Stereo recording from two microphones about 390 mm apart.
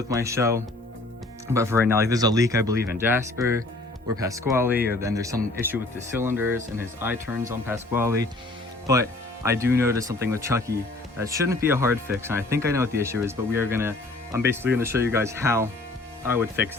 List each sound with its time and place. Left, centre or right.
0.1 s speech: centre